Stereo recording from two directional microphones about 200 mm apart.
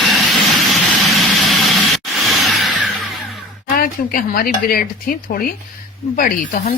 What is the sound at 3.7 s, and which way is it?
Speech, 45° left (ahead or behind).